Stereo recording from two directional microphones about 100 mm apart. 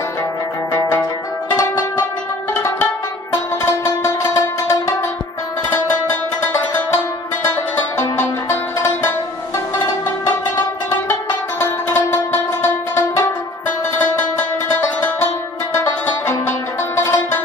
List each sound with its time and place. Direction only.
4.0 s music: 30° left (ahead or behind)
8.0 s music: 25° left (ahead or behind)
11.9 s music: 20° left (ahead or behind)
13.7 s music: 20° left (ahead or behind)
15.7 s music: 25° left (ahead or behind)